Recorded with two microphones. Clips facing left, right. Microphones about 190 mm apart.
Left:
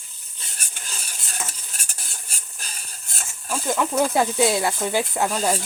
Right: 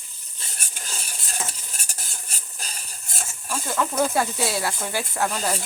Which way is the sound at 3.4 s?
15° left (ahead or behind).